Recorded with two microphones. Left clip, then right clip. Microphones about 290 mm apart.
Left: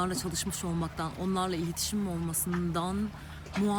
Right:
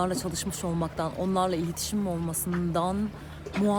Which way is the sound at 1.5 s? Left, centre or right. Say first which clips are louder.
Right 4 dB; centre.